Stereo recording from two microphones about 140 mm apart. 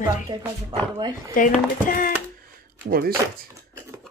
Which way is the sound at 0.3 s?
25° right (ahead or behind).